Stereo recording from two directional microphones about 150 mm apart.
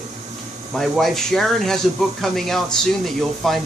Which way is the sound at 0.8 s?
Centre (ahead or behind).